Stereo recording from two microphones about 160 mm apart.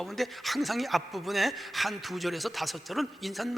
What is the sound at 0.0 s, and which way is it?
Speech, centre (ahead or behind).